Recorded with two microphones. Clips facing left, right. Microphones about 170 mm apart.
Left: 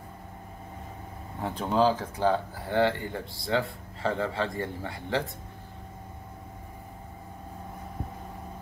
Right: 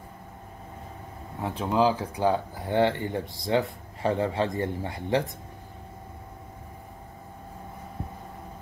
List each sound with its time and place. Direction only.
1.4 s speech: 5° right (ahead or behind)